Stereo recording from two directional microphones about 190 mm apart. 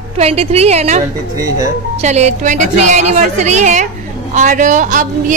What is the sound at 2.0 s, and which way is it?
A man's voice, 35° right (ahead or behind).